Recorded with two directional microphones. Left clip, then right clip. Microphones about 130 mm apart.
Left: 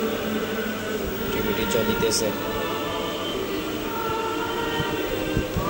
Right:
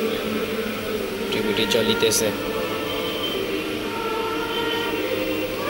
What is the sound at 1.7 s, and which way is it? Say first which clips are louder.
Speech: right 3 dB; 10° right (ahead or behind).